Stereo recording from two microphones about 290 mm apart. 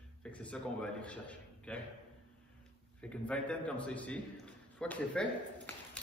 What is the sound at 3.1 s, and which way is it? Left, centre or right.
A man's voice, centre.